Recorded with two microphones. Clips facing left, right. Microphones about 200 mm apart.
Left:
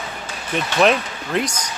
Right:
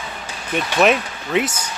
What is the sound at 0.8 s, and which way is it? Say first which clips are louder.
Speech: even; 5° right (ahead or behind).